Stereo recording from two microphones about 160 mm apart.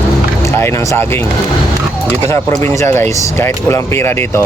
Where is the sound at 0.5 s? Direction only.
15° left (ahead or behind).